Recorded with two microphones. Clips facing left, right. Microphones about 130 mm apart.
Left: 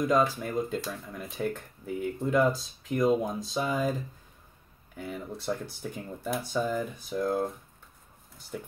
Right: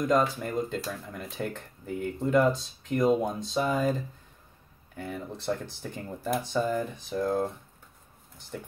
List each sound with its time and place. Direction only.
0.0 s speech: centre (ahead or behind)
4.9 s speech: 5° left (ahead or behind)